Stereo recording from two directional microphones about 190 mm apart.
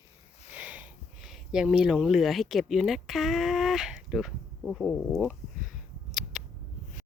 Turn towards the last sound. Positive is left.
turn(degrees=0)  # may be behind; listen again after turning